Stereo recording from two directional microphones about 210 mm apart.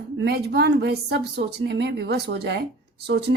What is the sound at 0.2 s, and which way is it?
Speech, 50° right (ahead or behind).